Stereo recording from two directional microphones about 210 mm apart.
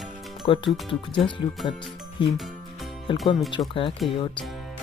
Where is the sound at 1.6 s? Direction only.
Centre (ahead or behind).